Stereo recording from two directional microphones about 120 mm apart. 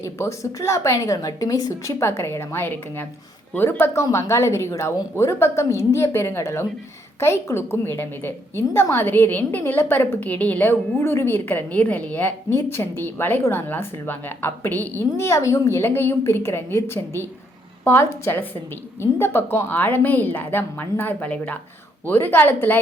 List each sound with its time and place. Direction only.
0.0 s a woman's voice: 25° left (ahead or behind)